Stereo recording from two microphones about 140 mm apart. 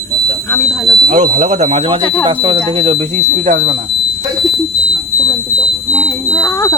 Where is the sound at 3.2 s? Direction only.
60° right (ahead or behind).